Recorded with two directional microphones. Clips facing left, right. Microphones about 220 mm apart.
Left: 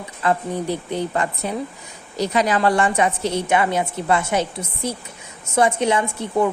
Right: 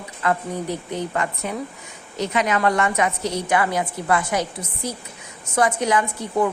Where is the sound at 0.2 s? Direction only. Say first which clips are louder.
Left 2 dB; 30° left (ahead or behind).